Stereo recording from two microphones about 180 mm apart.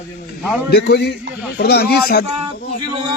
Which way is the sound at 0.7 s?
65° left (ahead or behind).